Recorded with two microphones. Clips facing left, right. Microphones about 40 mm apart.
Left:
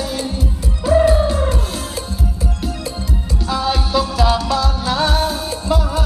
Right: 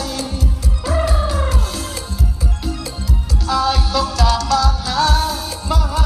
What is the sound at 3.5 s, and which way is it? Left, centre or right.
Music, centre.